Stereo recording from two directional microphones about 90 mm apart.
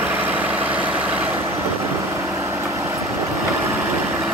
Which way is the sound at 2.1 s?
30° right (ahead or behind).